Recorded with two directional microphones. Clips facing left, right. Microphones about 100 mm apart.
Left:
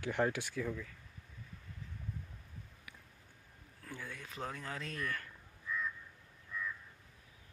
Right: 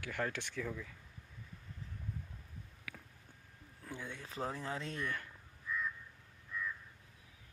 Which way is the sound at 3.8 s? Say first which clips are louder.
Right 1 dB; 20° right (ahead or behind).